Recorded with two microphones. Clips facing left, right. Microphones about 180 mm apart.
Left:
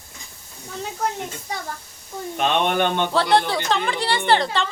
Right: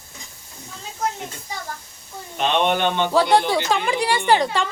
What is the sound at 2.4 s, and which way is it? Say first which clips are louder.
Speech: even; 50° left (ahead or behind).